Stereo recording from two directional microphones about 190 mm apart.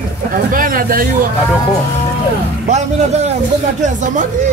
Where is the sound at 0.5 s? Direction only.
50° right (ahead or behind).